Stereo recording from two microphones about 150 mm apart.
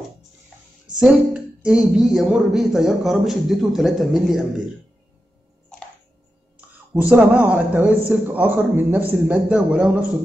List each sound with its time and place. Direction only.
0.9 s a woman's voice: 5° right (ahead or behind)
6.9 s a man's voice: 15° right (ahead or behind)